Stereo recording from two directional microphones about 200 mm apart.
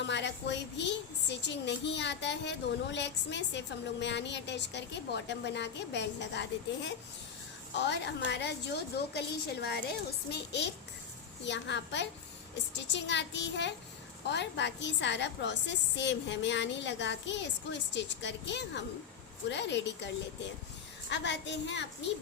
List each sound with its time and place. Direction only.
0.0 s a woman's voice: 60° left (ahead or behind)
21.1 s a woman's voice: 60° left (ahead or behind)